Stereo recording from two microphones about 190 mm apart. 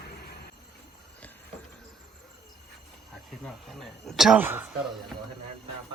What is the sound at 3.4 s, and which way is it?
Speech, centre (ahead or behind).